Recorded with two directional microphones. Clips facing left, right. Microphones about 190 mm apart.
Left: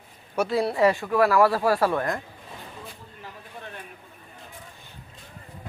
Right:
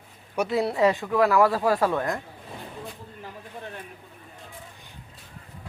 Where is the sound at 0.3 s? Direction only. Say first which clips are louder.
Left 1 dB; 20° right (ahead or behind).